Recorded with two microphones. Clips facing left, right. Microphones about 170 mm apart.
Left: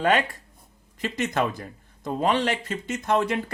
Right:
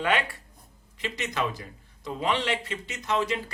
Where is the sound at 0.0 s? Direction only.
45° left (ahead or behind).